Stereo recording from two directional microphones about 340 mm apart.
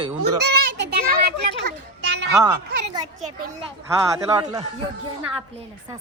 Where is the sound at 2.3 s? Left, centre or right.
Centre.